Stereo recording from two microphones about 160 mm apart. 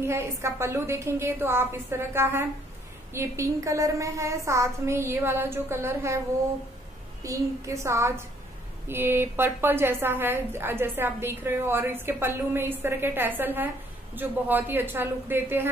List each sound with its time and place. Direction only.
0.0 s a woman's voice: 15° right (ahead or behind)
7.2 s a woman's voice: 20° right (ahead or behind)